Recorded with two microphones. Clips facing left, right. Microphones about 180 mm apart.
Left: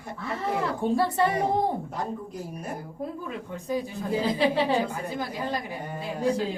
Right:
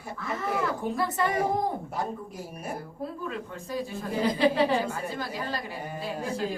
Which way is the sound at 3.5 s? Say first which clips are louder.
Left 6 dB; 15° left (ahead or behind).